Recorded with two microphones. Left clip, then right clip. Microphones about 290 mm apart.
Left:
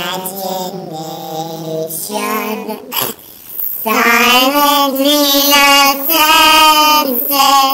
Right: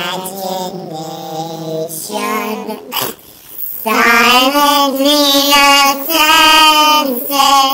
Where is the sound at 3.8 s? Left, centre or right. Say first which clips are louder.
Even; left.